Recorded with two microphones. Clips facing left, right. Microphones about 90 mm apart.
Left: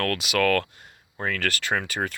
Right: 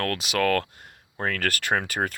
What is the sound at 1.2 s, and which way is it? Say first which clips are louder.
Speech: right 1 dB; 45° right (ahead or behind).